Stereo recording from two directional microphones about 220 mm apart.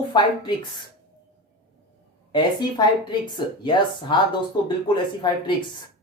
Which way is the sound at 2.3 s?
20° left (ahead or behind).